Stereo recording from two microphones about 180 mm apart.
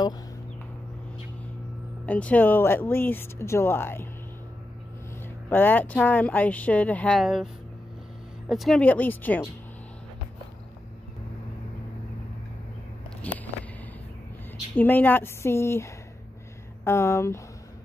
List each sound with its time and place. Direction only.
2.0 s speech: 10° left (ahead or behind)
5.5 s speech: 10° left (ahead or behind)
8.5 s speech: centre (ahead or behind)
13.3 s vehicle: 10° left (ahead or behind)
14.8 s speech: 10° left (ahead or behind)